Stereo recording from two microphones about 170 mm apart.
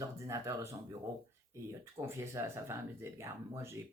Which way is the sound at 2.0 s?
15° right (ahead or behind).